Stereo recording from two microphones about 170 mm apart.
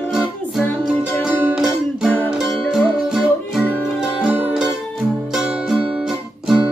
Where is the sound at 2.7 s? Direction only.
Centre (ahead or behind).